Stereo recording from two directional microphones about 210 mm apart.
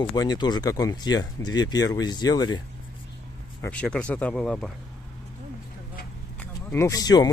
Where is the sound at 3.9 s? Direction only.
5° left (ahead or behind).